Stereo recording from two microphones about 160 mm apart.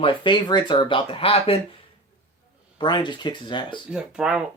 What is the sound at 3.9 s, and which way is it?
Speech, 5° right (ahead or behind).